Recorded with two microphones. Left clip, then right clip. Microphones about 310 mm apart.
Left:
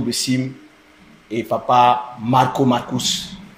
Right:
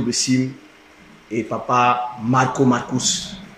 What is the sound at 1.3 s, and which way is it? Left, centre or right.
Speech, left.